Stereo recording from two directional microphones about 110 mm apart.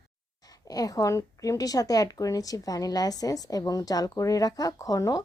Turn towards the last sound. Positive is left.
turn(degrees=30)  # may be behind; listen again after turning